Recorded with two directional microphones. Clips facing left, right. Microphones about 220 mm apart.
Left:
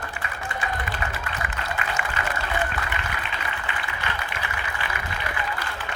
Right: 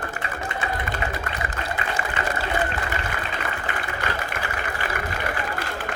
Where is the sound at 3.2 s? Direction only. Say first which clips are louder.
Right 3 dB; 45° right (ahead or behind).